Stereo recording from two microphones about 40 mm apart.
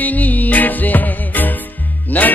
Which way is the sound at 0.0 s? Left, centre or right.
Left.